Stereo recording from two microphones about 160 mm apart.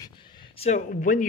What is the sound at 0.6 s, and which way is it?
Speech, 55° left (ahead or behind).